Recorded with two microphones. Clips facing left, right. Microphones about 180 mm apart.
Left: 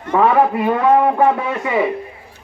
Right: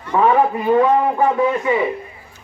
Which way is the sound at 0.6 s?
65° left (ahead or behind).